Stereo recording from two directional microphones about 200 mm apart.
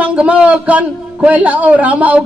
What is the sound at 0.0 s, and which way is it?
A man's voice, 5° right (ahead or behind).